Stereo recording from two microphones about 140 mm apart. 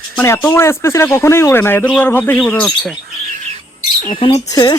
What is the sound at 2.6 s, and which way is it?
Speech, centre (ahead or behind).